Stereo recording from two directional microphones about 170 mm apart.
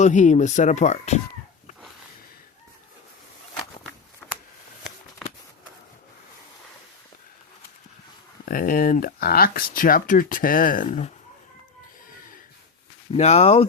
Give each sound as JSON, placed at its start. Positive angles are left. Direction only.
{"t": 0.0, "sound": "speech", "side_deg": 45}
{"t": 4.2, "sound": "a sound", "side_deg": 5}
{"t": 8.4, "sound": "speech", "side_deg": 55}
{"t": 13.1, "sound": "speech", "side_deg": 40}